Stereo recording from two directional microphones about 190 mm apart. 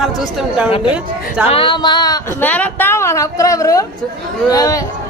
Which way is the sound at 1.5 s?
25° left (ahead or behind).